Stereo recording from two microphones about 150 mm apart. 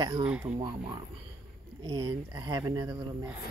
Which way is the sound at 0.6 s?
30° right (ahead or behind).